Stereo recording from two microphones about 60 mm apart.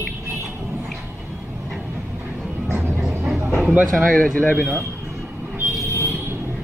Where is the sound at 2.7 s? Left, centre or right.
Right.